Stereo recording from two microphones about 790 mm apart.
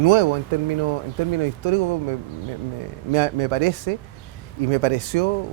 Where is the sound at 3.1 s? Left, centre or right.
Right.